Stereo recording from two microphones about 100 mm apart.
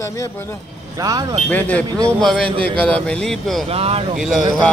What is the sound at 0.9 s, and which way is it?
Speech, 35° right (ahead or behind).